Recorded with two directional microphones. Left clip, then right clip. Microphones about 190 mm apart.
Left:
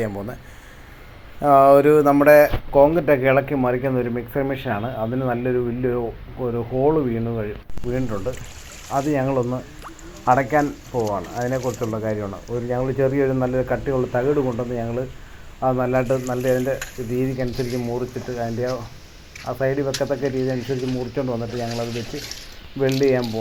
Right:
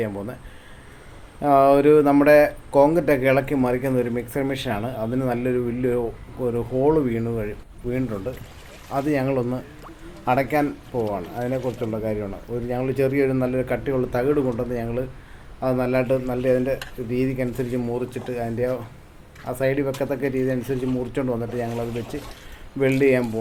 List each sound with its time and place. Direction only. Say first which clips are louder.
0.0 s speech: left 1 dB; 10° right (ahead or behind)
1.4 s speech: left 3 dB; 5° right (ahead or behind)